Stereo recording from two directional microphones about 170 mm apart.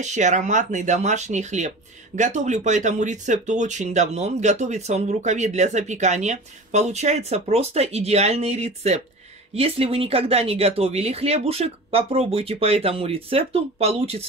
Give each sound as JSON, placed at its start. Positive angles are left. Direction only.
{"t": 0.0, "sound": "speech", "side_deg": -45}